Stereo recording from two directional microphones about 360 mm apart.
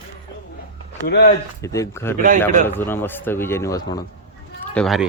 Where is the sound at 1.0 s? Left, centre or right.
Left.